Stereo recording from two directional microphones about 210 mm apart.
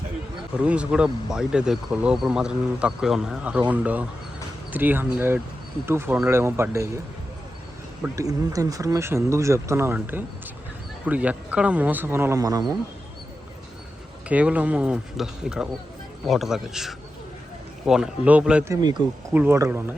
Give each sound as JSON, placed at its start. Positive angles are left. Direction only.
{"t": 0.6, "sound": "speech", "side_deg": -5}
{"t": 8.0, "sound": "speech", "side_deg": -15}
{"t": 14.3, "sound": "speech", "side_deg": -5}
{"t": 18.8, "sound": "speech", "side_deg": -20}
{"t": 19.3, "sound": "speech", "side_deg": -10}